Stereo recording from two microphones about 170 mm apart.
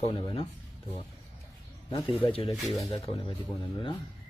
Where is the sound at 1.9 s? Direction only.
30° left (ahead or behind).